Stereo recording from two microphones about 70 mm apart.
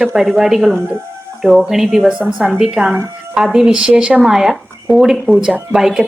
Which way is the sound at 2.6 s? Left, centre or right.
Centre.